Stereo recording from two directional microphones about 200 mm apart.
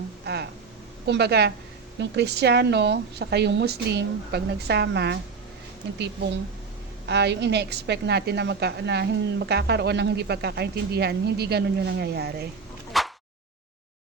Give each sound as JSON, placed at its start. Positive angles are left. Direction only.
{"t": 1.0, "sound": "a woman's voice", "side_deg": -55}
{"t": 7.1, "sound": "a woman's voice", "side_deg": -60}
{"t": 12.9, "sound": "a sound", "side_deg": 0}